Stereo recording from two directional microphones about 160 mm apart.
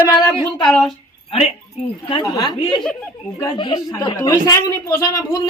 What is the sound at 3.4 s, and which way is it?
Speech, 25° left (ahead or behind).